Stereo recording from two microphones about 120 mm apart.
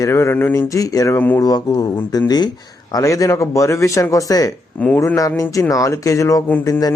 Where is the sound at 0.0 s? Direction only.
20° left (ahead or behind).